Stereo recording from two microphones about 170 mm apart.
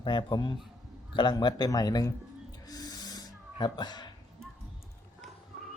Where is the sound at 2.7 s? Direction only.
25° left (ahead or behind).